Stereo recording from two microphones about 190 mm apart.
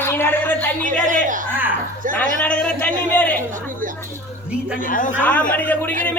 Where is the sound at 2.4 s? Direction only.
10° left (ahead or behind).